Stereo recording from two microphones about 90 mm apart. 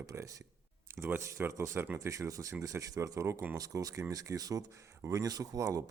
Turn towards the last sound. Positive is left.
turn(degrees=-40)  # may be behind; listen again after turning